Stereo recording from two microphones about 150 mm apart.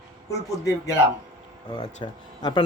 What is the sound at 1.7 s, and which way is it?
Speech, 35° left (ahead or behind).